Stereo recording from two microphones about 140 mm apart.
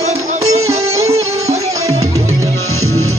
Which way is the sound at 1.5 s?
50° right (ahead or behind).